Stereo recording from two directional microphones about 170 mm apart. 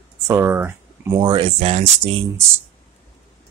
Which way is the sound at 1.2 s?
25° right (ahead or behind).